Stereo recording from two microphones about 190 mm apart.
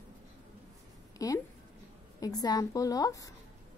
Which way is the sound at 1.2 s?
20° left (ahead or behind).